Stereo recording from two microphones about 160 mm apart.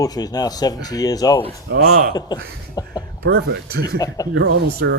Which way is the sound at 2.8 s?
25° left (ahead or behind).